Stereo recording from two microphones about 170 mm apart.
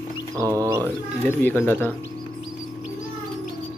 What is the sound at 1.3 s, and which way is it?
Speech, 10° left (ahead or behind).